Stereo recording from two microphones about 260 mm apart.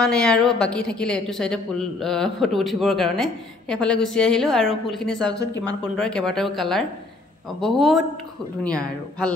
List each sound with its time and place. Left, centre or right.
0.0 s a woman's voice: centre